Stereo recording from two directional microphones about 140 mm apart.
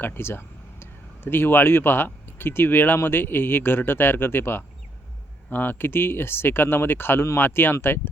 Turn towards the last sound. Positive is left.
turn(degrees=15)  # may be behind; listen again after turning